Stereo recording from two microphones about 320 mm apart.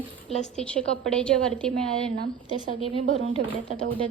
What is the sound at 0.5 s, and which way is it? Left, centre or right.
A woman's voice, centre.